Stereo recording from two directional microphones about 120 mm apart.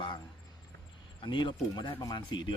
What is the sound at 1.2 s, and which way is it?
Speech, 40° left (ahead or behind).